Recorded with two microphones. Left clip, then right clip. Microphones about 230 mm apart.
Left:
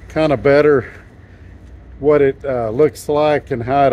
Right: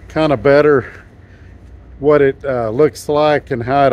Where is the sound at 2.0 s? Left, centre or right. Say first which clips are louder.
Right 1 dB; right.